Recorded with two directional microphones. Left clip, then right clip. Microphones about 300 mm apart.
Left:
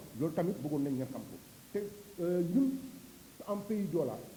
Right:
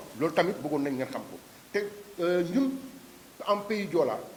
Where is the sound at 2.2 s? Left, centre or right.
Centre.